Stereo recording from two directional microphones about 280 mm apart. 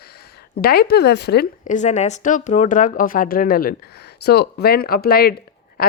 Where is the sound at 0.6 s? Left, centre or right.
Left.